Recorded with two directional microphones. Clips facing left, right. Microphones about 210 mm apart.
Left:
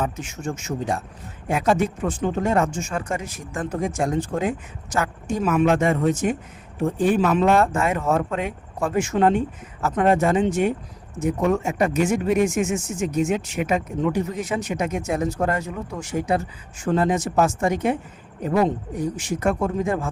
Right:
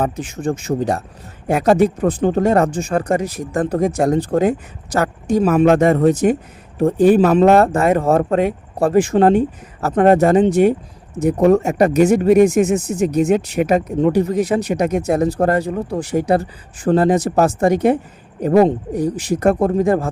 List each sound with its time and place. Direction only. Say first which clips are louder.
0.0 s speech: right 7 dB; 35° right (ahead or behind)
9.9 s speech: right 7 dB; 45° right (ahead or behind)